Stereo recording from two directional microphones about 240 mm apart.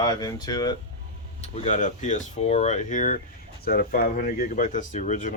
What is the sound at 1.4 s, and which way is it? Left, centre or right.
Speech, left.